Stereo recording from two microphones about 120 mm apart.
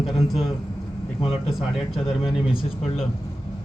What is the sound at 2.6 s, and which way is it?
Speech, 55° left (ahead or behind).